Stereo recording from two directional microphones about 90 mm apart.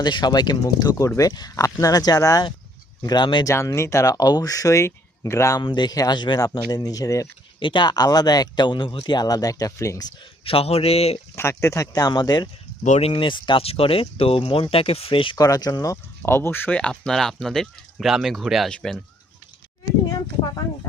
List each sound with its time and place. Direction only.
0.0 s speech: 55° left (ahead or behind)
3.0 s speech: 55° left (ahead or behind)
3.4 s speech: 35° left (ahead or behind)
5.6 s speech: 55° left (ahead or behind); by 7.3 s 40° left (ahead or behind)
7.6 s speech: 60° left (ahead or behind)
9.1 s speech: 45° left (ahead or behind)
10.4 s speech: 90° left
11.3 s speech: 30° left (ahead or behind); by 12.5 s 50° left (ahead or behind)
13.1 s speech: 70° left (ahead or behind)
15.4 s speech: 45° left (ahead or behind)
16.2 s speech: 25° left (ahead or behind); by 18.9 s 5° left (ahead or behind)